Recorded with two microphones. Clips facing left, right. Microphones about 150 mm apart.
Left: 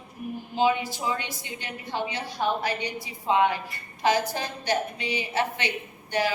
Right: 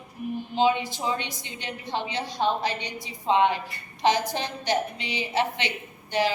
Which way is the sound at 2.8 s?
10° left (ahead or behind).